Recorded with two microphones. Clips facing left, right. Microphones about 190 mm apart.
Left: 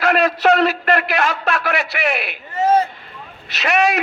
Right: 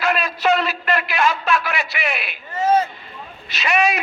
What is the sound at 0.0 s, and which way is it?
A man's voice, 75° left (ahead or behind).